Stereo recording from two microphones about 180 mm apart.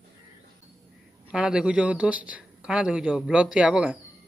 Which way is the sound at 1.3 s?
5° right (ahead or behind).